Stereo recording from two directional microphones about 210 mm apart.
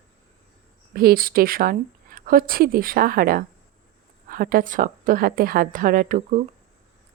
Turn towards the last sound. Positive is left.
turn(degrees=-40)  # may be behind; listen again after turning